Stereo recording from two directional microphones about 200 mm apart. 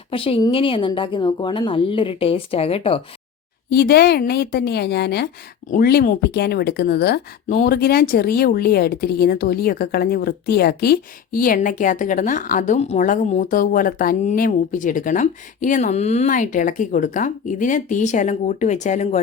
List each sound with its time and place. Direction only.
0.1 s a woman's voice: 25° left (ahead or behind)
3.7 s a woman's voice: 50° left (ahead or behind)